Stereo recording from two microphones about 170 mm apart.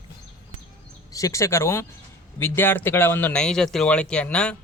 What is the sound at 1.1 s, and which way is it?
Speech, 20° left (ahead or behind).